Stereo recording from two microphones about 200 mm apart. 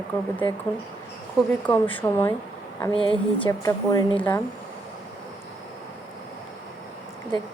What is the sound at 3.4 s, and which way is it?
Speech, 15° left (ahead or behind).